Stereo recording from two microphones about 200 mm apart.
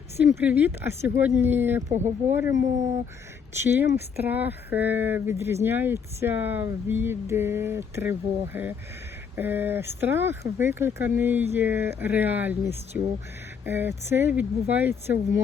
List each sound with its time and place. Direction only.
0.2 s speech: 10° right (ahead or behind)
1.9 s speech: 35° right (ahead or behind)
2.3 s speech: 15° right (ahead or behind)